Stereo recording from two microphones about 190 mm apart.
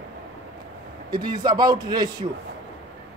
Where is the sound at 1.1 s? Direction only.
20° right (ahead or behind).